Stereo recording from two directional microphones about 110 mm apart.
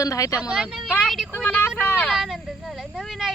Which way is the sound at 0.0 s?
30° left (ahead or behind).